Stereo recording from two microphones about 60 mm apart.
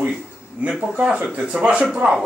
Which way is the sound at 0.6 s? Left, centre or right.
Centre.